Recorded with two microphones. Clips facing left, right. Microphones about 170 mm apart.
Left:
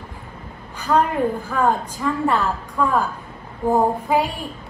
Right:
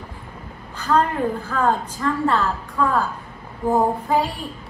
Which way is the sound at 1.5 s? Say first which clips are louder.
Left 1 dB; 15° left (ahead or behind).